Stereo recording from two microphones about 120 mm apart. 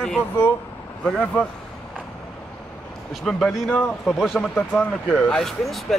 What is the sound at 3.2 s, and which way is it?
Speech, centre (ahead or behind).